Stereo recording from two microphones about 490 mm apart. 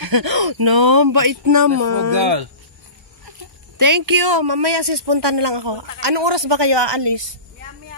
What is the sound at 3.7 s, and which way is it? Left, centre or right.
Speech, right.